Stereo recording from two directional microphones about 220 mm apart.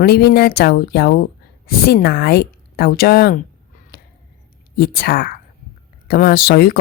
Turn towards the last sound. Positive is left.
turn(degrees=45)  # may be behind; listen again after turning